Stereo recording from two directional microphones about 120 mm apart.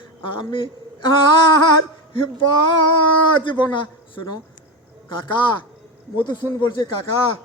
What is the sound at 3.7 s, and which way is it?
A man's voice, 40° left (ahead or behind).